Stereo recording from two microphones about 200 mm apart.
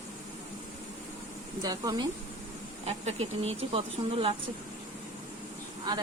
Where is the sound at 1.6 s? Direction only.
20° right (ahead or behind).